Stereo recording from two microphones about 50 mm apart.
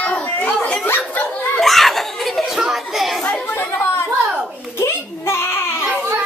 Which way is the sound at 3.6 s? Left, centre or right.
Left.